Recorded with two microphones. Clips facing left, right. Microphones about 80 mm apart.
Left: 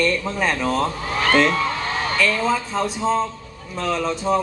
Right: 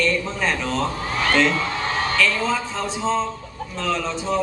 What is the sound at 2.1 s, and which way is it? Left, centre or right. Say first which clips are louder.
A man's voice: left 3 dB; centre.